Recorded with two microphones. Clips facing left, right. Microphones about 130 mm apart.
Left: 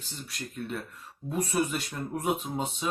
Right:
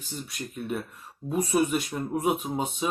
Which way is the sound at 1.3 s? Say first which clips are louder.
Right 4 dB; 10° right (ahead or behind).